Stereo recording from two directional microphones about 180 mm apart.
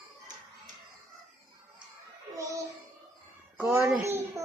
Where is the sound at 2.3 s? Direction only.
20° right (ahead or behind).